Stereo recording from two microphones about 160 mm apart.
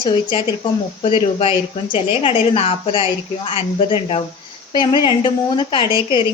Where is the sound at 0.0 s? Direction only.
30° left (ahead or behind).